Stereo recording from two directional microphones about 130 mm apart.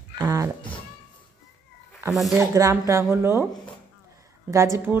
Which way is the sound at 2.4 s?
25° right (ahead or behind).